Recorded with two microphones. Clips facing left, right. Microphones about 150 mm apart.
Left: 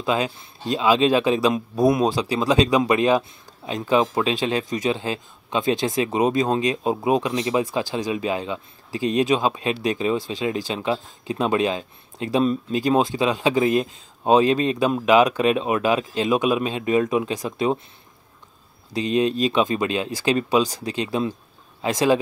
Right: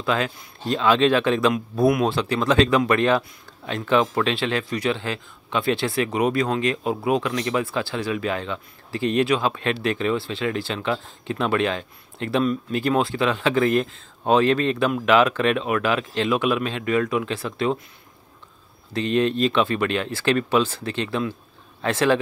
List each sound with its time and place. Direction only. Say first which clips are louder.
0.0 s speech: left 1 dB; 20° left (ahead or behind)
18.9 s speech: even; 10° left (ahead or behind)